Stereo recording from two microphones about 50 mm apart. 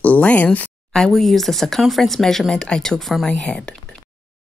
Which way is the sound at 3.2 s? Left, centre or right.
Centre.